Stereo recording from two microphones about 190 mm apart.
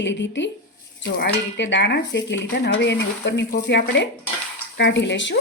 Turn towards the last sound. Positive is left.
turn(degrees=70)  # may be behind; listen again after turning